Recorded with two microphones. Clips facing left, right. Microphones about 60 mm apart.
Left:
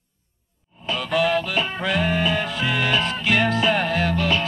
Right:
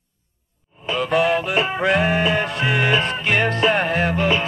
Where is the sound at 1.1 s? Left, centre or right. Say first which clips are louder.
Right 2 dB; centre.